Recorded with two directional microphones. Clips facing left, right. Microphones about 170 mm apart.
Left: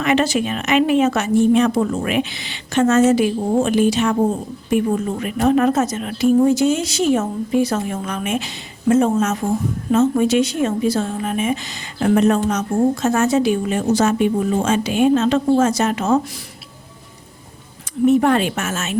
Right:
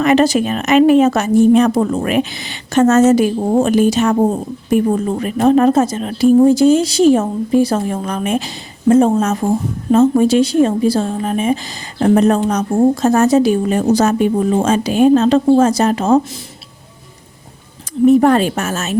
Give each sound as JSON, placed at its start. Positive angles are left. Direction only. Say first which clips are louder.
{"t": 0.0, "sound": "speech", "louder": "right 5 dB", "side_deg": -40}
{"t": 18.0, "sound": "speech", "louder": "right 5 dB", "side_deg": -40}